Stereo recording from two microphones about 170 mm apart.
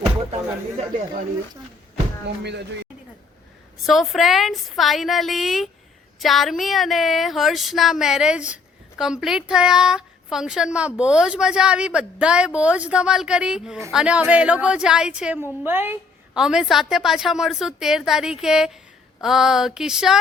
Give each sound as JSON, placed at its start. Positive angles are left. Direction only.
{"t": 2.2, "sound": "speech", "side_deg": -90}
{"t": 3.8, "sound": "a woman's voice", "side_deg": 0}